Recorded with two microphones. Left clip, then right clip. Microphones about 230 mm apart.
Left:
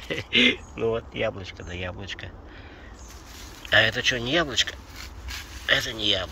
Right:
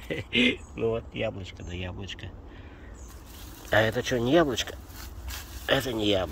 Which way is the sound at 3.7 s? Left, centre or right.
Right.